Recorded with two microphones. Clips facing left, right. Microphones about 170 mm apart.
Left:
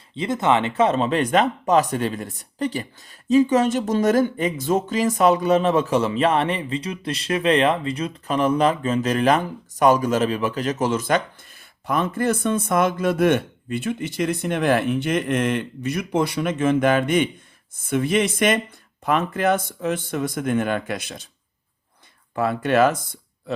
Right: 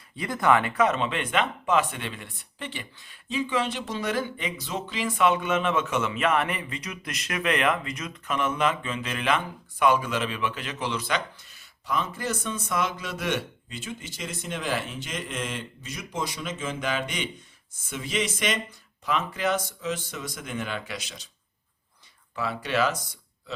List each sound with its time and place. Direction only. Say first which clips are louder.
0.2 s speech: left 3 dB; 25° left (ahead or behind); by 21.2 s 55° left (ahead or behind)
22.4 s speech: left 8 dB; 55° left (ahead or behind)